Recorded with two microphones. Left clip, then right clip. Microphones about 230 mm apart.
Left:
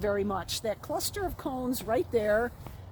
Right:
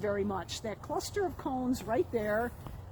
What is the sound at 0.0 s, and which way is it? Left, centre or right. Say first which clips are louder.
Speech: left 3 dB; left.